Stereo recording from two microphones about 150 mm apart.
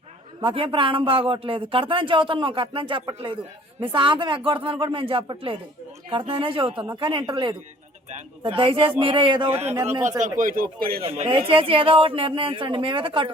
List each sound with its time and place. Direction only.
0.4 s speech: 35° right (ahead or behind)
9.6 s speech: 15° right (ahead or behind)
10.2 s speech: 60° right (ahead or behind); by 11.0 s 80° right
11.0 s speech: 40° right (ahead or behind)